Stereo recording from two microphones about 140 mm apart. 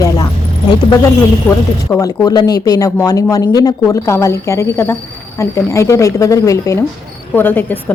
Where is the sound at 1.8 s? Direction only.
20° left (ahead or behind).